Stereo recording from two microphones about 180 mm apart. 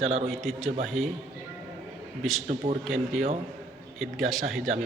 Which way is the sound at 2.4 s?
35° right (ahead or behind).